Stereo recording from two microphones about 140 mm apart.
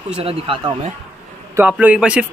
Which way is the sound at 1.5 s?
10° right (ahead or behind).